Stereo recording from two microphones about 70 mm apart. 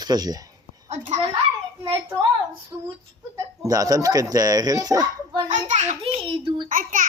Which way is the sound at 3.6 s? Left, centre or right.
Right.